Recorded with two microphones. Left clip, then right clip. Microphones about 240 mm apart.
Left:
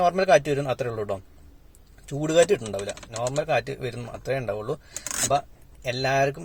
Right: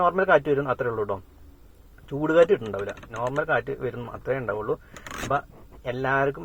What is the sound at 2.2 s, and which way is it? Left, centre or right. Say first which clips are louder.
Speech: right 1 dB; left.